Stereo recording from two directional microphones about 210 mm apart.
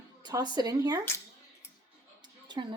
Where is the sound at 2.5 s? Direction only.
20° right (ahead or behind).